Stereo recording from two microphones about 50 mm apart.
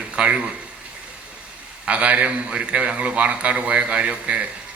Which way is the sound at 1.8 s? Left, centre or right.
Right.